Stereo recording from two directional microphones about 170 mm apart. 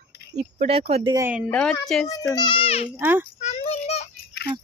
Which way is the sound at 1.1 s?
10° right (ahead or behind).